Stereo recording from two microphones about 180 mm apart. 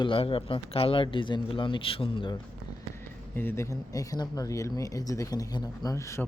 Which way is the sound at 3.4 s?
15° left (ahead or behind).